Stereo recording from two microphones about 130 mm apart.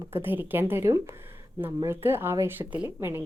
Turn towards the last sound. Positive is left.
turn(degrees=-15)  # may be behind; listen again after turning